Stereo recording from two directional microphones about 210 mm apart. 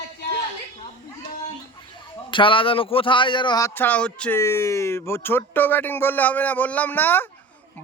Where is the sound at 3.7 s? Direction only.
5° left (ahead or behind).